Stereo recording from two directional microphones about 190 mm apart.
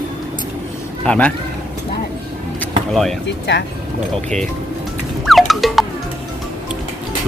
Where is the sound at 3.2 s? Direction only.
65° left (ahead or behind).